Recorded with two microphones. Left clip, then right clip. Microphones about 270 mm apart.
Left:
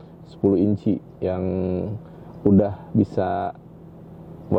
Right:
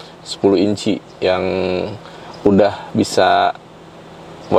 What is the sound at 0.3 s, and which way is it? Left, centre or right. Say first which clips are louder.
A man's voice: right 6 dB; centre.